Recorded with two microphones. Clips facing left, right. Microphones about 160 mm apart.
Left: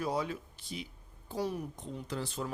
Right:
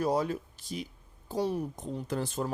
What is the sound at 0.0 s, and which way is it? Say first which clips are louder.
Speech: right 5 dB; 40° right (ahead or behind).